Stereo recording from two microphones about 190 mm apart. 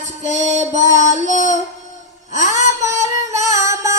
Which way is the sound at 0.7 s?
40° left (ahead or behind).